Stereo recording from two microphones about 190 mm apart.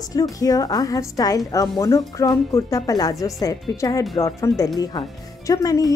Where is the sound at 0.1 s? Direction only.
20° left (ahead or behind).